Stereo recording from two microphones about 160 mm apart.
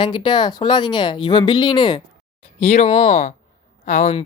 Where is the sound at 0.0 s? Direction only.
30° left (ahead or behind).